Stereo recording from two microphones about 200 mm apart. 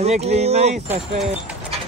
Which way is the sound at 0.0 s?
30° right (ahead or behind).